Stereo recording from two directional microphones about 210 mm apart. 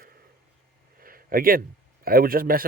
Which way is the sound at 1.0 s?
45° right (ahead or behind).